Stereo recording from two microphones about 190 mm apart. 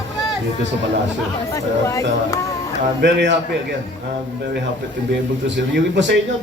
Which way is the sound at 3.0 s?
65° right (ahead or behind).